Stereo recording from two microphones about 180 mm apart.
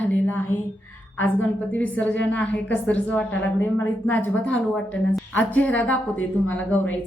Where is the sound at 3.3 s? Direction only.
90° left.